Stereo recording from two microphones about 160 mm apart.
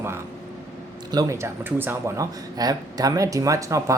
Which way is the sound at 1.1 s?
20° right (ahead or behind).